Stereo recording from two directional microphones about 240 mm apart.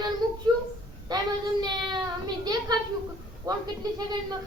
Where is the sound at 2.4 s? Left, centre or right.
Centre.